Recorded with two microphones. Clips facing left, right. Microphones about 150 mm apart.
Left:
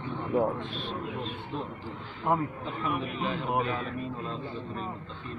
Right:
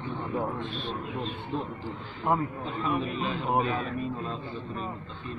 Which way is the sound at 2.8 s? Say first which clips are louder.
Right 2 dB; 30° right (ahead or behind).